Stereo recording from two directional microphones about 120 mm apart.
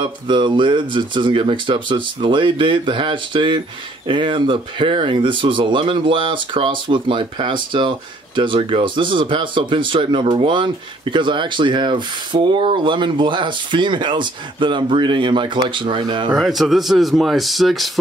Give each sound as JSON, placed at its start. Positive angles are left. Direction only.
{"t": 0.0, "sound": "speech", "side_deg": -40}
{"t": 16.3, "sound": "speech", "side_deg": 0}